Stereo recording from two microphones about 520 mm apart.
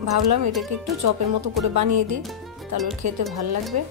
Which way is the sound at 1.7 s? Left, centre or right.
Right.